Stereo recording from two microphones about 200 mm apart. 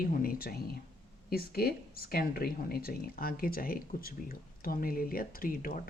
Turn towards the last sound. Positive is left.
turn(degrees=45)  # may be behind; listen again after turning